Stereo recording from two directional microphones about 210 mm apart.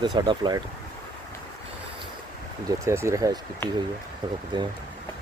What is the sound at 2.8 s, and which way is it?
Speech, 15° right (ahead or behind).